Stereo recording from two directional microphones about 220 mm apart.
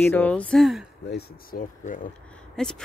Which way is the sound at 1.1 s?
40° left (ahead or behind).